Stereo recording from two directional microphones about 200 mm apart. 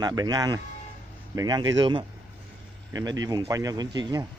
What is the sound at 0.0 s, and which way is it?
Speech, 20° right (ahead or behind).